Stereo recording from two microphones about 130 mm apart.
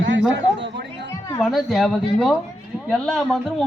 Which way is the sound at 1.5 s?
Centre (ahead or behind).